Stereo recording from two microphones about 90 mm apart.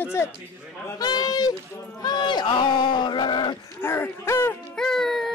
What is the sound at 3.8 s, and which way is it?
Speech, 25° left (ahead or behind).